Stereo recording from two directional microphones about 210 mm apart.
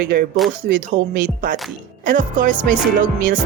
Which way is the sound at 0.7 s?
40° right (ahead or behind).